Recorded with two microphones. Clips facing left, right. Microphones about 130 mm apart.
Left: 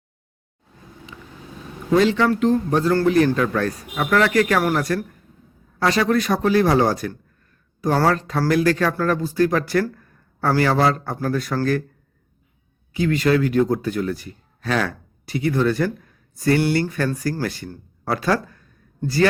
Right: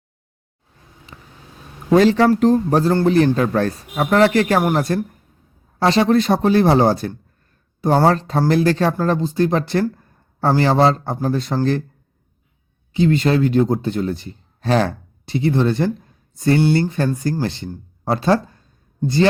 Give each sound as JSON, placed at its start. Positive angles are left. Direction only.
{"t": 1.1, "sound": "vehicle", "side_deg": -45}
{"t": 1.9, "sound": "speech", "side_deg": -40}
{"t": 12.9, "sound": "a man's voice", "side_deg": -25}